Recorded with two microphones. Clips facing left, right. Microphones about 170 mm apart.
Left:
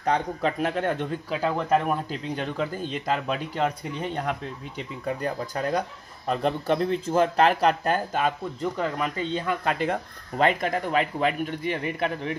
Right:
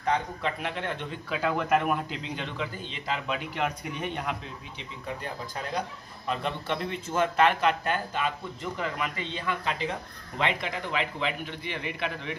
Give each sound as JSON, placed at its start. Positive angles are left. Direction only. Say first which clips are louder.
{"t": 0.0, "sound": "speech", "louder": "left 4 dB", "side_deg": 40}